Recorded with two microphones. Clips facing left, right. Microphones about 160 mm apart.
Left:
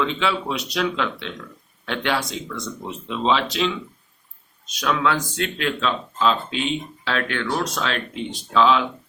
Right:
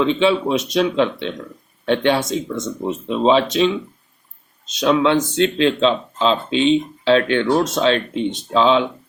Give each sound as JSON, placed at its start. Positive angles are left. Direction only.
{"t": 0.0, "sound": "speech", "side_deg": -20}